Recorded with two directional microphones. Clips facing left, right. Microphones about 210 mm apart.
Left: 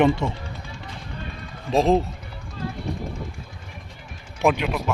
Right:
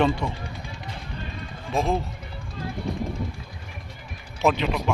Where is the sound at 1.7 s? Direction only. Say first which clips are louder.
Left 6 dB; 35° left (ahead or behind).